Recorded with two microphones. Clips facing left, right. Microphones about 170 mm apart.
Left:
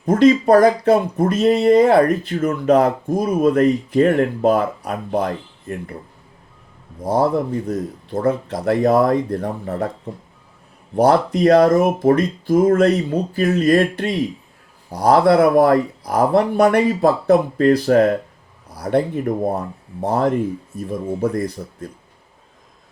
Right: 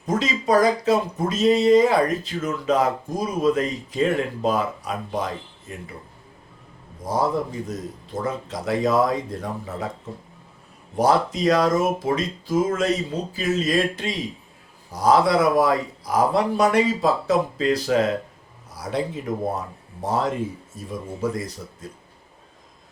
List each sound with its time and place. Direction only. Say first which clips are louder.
0.0 s speech: left 11 dB; 55° left (ahead or behind)
7.0 s speech: left 5 dB; 60° left (ahead or behind)
10.9 s speech: left 5 dB; 60° left (ahead or behind)